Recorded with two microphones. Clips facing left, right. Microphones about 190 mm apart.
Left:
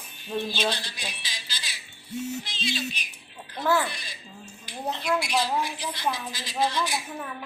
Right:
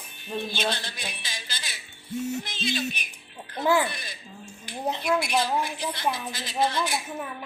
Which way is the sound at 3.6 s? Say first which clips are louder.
Right 2 dB; 15° right (ahead or behind).